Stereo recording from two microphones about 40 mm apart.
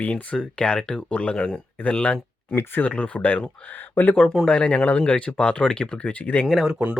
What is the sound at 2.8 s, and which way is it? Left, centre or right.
Speech, left.